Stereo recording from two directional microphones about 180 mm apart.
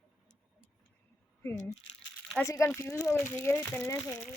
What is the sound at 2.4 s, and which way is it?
Speech, 15° left (ahead or behind).